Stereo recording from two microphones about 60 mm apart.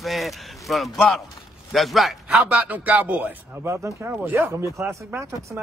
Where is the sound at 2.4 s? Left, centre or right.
Right.